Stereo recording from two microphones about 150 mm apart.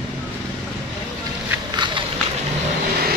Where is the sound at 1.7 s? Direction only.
30° right (ahead or behind).